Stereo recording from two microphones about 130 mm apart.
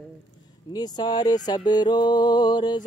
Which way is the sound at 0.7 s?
30° left (ahead or behind).